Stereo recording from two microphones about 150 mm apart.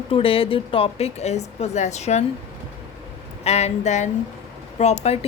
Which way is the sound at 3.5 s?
50° left (ahead or behind).